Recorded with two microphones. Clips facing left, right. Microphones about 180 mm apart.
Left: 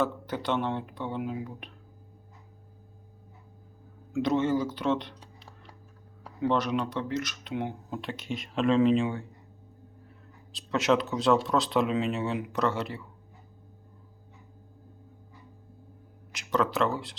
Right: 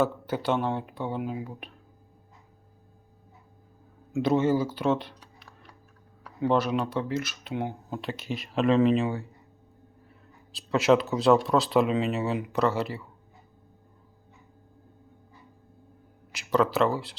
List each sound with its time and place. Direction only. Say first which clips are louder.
0.4 s speech: right 2 dB; 5° right (ahead or behind)
4.2 s speech: right 2 dB; 5° right (ahead or behind)
5.2 s a sound: left 1 dB; 25° left (ahead or behind)
6.4 s speech: right 2 dB; 5° right (ahead or behind)
10.5 s speech: right 4 dB; 5° right (ahead or behind)
16.3 s speech: right 3 dB; 5° right (ahead or behind)